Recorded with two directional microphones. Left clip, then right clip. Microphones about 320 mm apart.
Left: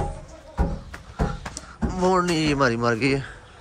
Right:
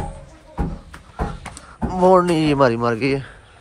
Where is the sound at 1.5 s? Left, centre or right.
Centre.